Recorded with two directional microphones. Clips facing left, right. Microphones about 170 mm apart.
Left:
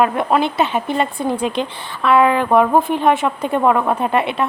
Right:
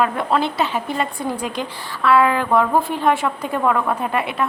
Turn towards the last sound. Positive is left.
turn(degrees=25)  # may be behind; listen again after turning